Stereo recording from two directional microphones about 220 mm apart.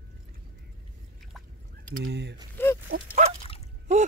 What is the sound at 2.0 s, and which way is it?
Gasp, 50° right (ahead or behind).